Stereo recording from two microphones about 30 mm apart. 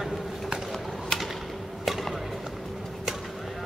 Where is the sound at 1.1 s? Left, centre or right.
Left.